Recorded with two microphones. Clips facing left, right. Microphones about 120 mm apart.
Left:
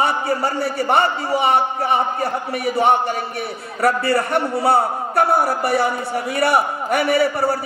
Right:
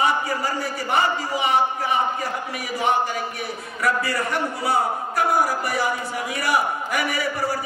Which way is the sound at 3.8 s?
30° left (ahead or behind).